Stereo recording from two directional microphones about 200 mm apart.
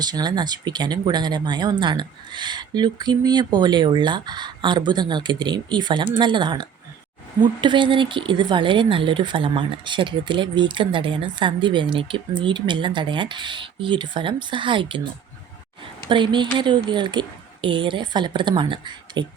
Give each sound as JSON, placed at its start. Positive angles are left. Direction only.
{"t": 0.0, "sound": "a woman's voice", "side_deg": -20}
{"t": 16.0, "sound": "a woman's voice", "side_deg": -25}